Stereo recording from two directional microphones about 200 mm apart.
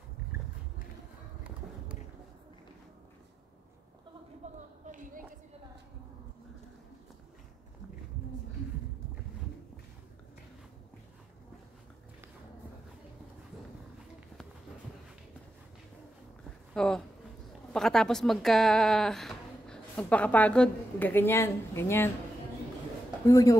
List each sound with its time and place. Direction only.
4.4 s a sound: 35° right (ahead or behind)
16.7 s a woman's voice: 5° left (ahead or behind)
23.2 s speech: 15° left (ahead or behind)